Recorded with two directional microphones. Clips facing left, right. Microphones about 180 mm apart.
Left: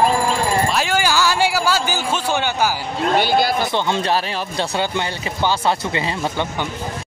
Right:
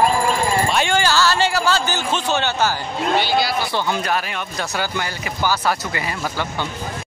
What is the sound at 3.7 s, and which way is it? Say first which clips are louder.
Speech: left 2 dB; 25° left (ahead or behind).